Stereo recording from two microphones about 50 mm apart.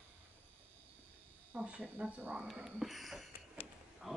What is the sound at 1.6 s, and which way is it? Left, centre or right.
Speech, right.